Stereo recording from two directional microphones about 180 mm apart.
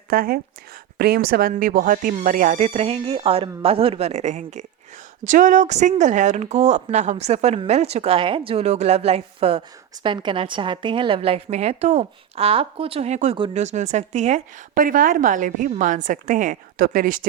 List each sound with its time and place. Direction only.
0.1 s a woman's voice: 55° right (ahead or behind)